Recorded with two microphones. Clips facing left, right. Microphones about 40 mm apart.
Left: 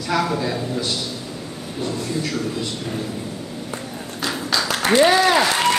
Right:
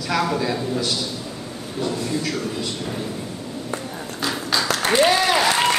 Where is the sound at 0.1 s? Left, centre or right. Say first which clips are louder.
Even; centre.